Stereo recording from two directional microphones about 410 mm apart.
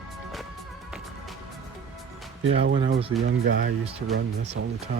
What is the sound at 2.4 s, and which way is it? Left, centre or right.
Speech, right.